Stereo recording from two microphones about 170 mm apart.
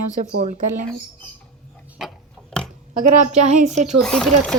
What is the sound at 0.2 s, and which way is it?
Speech, 50° right (ahead or behind).